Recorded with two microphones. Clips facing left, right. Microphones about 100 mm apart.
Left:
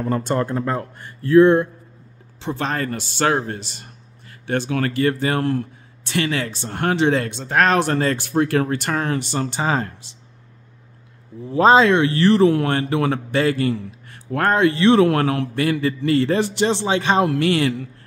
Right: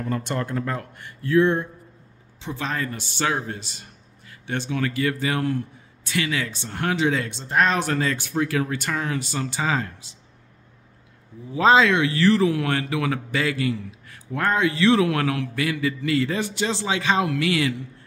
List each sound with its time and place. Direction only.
0.0 s speech: 35° left (ahead or behind)
2.4 s speech: 60° left (ahead or behind)
4.9 s speech: 40° left (ahead or behind)
7.3 s speech: 70° left (ahead or behind)
7.8 s speech: 40° left (ahead or behind)
9.5 s speech: 35° left (ahead or behind)
11.5 s speech: 40° left (ahead or behind)
12.2 s speech: 25° left (ahead or behind)
12.4 s speech: 35° left (ahead or behind)
14.3 s speech: 55° left (ahead or behind)
15.0 s speech: 45° left (ahead or behind)
17.0 s speech: 50° left (ahead or behind)